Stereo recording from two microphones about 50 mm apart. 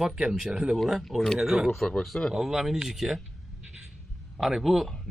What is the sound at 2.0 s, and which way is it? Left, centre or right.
Speech, centre.